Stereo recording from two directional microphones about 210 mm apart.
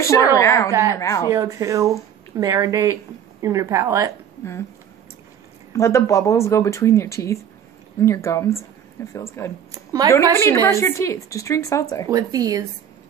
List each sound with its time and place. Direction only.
0.0 s speech: 15° left (ahead or behind)
1.3 s speech: 15° right (ahead or behind)
5.7 s speech: 15° left (ahead or behind)
9.7 s speech: 15° right (ahead or behind)
10.3 s speech: 10° left (ahead or behind)
12.1 s speech: 15° right (ahead or behind)